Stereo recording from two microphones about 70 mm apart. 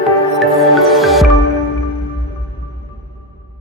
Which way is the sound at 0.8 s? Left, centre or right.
Centre.